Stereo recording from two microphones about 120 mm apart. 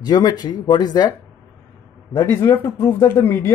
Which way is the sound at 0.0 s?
35° left (ahead or behind).